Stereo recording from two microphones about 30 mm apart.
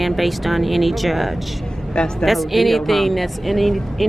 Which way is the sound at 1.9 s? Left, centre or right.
Left.